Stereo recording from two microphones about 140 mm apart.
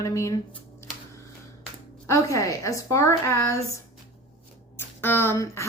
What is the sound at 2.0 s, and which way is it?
A woman's voice, 25° left (ahead or behind).